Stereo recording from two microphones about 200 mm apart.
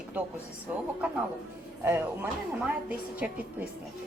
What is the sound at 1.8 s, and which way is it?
A woman's voice, 15° right (ahead or behind).